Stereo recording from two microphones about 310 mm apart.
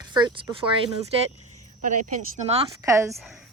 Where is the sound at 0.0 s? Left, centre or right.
Centre.